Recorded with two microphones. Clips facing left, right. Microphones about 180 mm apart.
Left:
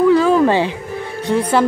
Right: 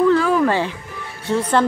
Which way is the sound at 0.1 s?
20° left (ahead or behind).